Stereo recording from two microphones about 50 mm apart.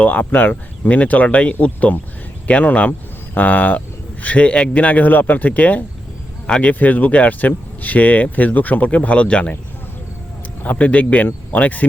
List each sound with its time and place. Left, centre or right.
0.0 s speech: left
10.6 s speech: left